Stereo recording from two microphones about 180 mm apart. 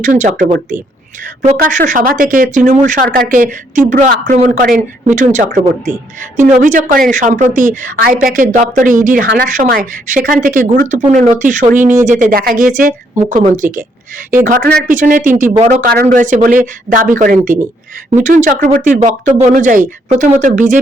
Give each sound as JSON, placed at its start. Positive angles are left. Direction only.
{"t": 0.0, "sound": "speech", "side_deg": -45}
{"t": 14.8, "sound": "speech", "side_deg": -45}